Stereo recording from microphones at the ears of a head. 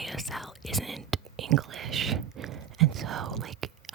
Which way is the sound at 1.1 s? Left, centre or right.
Right.